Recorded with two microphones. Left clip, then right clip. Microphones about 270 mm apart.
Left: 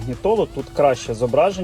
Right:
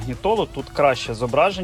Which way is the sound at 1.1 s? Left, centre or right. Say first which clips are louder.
Left 2 dB; centre.